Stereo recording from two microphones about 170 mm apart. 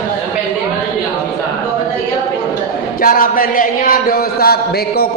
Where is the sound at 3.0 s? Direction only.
55° left (ahead or behind).